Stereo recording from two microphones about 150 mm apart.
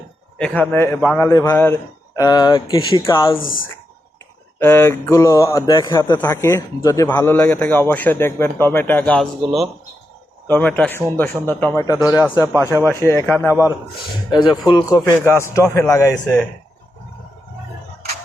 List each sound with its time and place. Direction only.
0.3 s a man's voice: 10° left (ahead or behind); by 3.0 s 30° left (ahead or behind)
3.4 s speech: 65° left (ahead or behind)
4.6 s a man's voice: 15° left (ahead or behind)
11.9 s a man's voice: 15° right (ahead or behind)
12.8 s a man's voice: 20° left (ahead or behind)
13.5 s a man's voice: 15° right (ahead or behind)
14.3 s speech: 30° left (ahead or behind)